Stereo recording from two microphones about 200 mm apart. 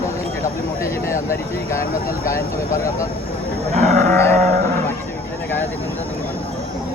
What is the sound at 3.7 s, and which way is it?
Livestock, 35° right (ahead or behind).